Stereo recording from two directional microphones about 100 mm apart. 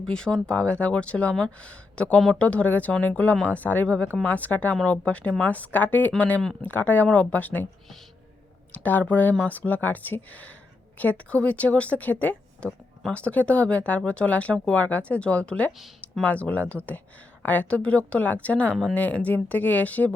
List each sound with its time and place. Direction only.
0.1 s speech: 10° left (ahead or behind)
8.7 s speech: 15° left (ahead or behind)